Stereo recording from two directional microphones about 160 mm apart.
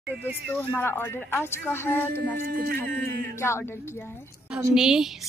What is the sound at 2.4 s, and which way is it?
Speech, 70° right (ahead or behind).